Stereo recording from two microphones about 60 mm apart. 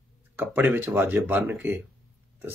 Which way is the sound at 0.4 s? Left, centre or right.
Right.